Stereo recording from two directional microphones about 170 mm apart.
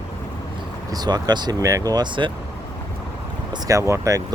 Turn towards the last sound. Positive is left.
turn(degrees=-20)  # may be behind; listen again after turning